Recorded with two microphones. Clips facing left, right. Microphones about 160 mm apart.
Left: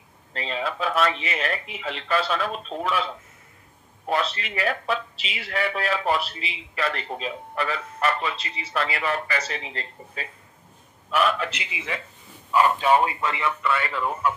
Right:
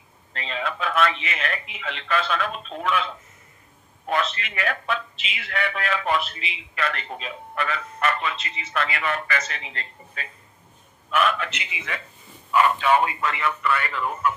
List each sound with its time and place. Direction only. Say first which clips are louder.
0.3 s speech: left 1 dB; 30° left (ahead or behind)
4.1 s a man's voice: even; 35° left (ahead or behind)